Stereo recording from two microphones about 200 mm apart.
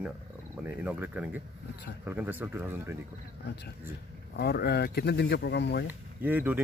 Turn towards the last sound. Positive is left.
turn(degrees=-10)  # may be behind; listen again after turning